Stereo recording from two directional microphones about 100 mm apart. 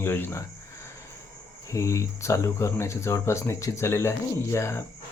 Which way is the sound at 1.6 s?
30° left (ahead or behind).